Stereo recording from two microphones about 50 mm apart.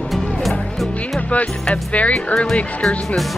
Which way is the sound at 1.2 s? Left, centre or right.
Left.